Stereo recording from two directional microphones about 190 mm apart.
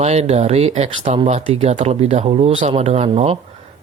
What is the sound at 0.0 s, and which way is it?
Speech, 35° right (ahead or behind).